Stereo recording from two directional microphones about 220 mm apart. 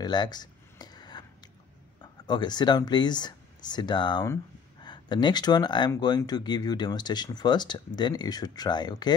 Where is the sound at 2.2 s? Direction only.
20° left (ahead or behind).